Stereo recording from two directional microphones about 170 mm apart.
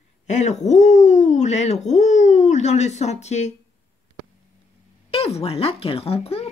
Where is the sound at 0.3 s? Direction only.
40° left (ahead or behind).